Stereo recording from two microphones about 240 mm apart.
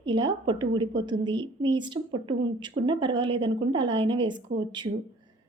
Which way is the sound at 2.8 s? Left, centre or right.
Centre.